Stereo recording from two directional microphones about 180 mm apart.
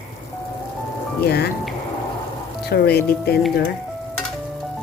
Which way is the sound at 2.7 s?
60° left (ahead or behind).